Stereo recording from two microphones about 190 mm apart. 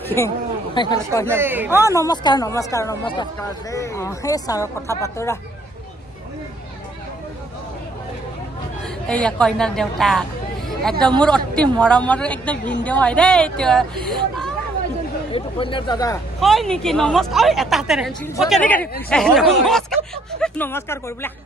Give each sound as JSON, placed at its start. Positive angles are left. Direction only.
{"t": 0.2, "sound": "speech", "side_deg": 15}
{"t": 1.2, "sound": "speech", "side_deg": -10}
{"t": 1.9, "sound": "speech", "side_deg": 20}
{"t": 8.8, "sound": "a woman's voice", "side_deg": 5}
{"t": 15.3, "sound": "speech", "side_deg": 25}
{"t": 16.3, "sound": "a woman's voice", "side_deg": 0}